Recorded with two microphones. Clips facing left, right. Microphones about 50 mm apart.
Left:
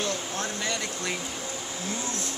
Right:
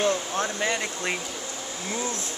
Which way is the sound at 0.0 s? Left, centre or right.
Right.